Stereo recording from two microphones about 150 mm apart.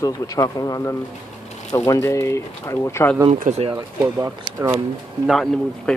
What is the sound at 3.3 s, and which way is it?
Speech, 45° right (ahead or behind).